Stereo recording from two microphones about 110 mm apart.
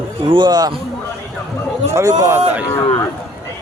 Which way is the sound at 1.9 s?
25° right (ahead or behind).